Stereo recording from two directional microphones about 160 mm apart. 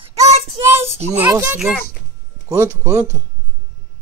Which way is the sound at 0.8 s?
40° right (ahead or behind).